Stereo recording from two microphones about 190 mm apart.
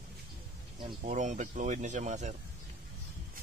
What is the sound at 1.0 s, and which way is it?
Speech, 40° right (ahead or behind).